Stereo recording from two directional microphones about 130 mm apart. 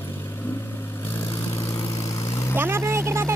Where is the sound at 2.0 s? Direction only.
25° left (ahead or behind).